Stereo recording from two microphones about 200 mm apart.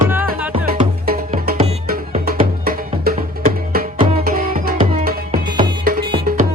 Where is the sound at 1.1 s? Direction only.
45° right (ahead or behind).